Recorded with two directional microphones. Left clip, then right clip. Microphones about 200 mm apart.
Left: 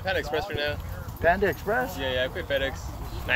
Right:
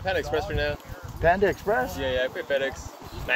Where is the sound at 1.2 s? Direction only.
30° right (ahead or behind).